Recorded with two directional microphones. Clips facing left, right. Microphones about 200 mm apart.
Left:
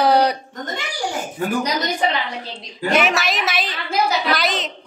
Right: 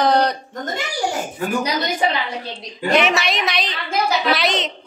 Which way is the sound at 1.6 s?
5° right (ahead or behind).